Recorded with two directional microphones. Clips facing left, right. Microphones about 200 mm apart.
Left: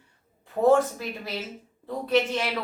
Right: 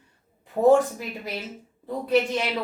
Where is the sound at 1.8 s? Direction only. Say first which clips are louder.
Right 1 dB; 10° right (ahead or behind).